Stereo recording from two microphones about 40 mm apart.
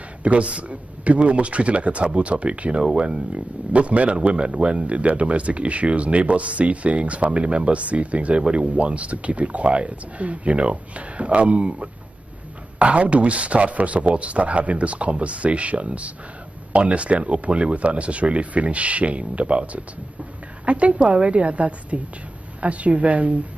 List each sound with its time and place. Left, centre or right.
0.2 s speech: right
3.7 s speech: right